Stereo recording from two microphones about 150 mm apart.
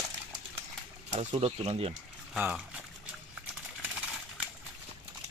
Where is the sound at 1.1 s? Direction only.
45° right (ahead or behind).